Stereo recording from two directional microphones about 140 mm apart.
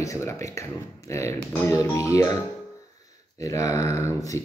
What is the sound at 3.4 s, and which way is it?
Speech, 25° left (ahead or behind).